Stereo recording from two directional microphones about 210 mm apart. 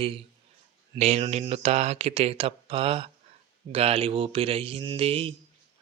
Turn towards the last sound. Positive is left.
turn(degrees=-25)  # may be behind; listen again after turning